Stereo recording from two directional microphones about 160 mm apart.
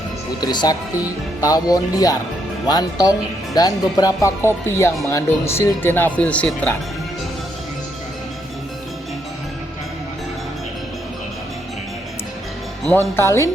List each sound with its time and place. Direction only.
0.4 s speech: 25° left (ahead or behind); by 6.7 s 5° left (ahead or behind)
13.1 s speech: 15° left (ahead or behind)